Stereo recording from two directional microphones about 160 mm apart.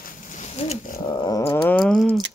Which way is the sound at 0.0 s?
50° left (ahead or behind).